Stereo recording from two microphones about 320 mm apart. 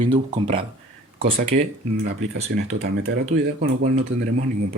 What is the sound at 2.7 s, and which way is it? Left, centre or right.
Speech, right.